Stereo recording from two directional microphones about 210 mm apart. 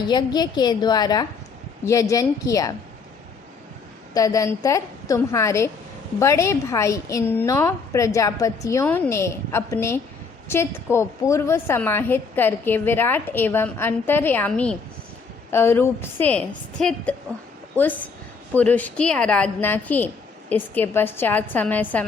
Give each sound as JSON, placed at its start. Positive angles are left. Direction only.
{"t": 0.1, "sound": "a woman's voice", "side_deg": 20}
{"t": 4.1, "sound": "a woman's voice", "side_deg": 15}
{"t": 18.5, "sound": "a woman's voice", "side_deg": 5}